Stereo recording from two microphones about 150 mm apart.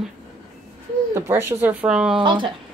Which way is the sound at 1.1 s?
15° right (ahead or behind).